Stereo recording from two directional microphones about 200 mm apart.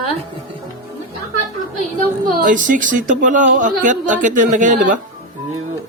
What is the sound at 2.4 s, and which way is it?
A woman's voice, 40° right (ahead or behind).